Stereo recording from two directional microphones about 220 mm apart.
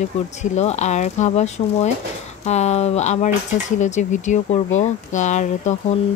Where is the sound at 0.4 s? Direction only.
30° left (ahead or behind).